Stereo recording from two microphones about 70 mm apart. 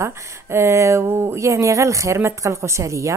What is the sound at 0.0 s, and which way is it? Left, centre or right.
A woman's voice, right.